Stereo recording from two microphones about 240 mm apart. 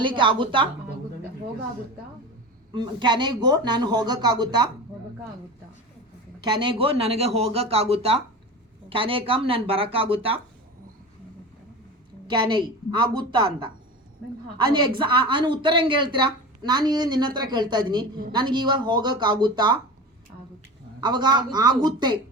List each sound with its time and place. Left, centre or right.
0.0 s a man's voice: right
2.7 s a woman's voice: centre
6.4 s a man's voice: centre
12.3 s a man's voice: centre
21.0 s a woman's voice: centre